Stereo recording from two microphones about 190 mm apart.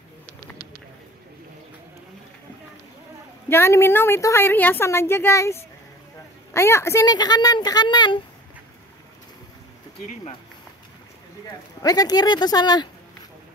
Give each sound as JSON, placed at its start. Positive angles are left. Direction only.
{"t": 3.4, "sound": "a woman's voice", "side_deg": 15}
{"t": 11.8, "sound": "speech", "side_deg": 20}